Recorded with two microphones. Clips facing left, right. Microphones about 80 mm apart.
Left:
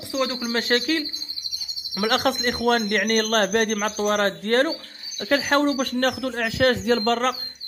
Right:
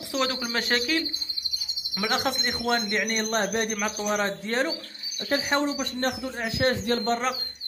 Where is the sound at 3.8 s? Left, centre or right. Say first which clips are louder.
Left 5 dB; left.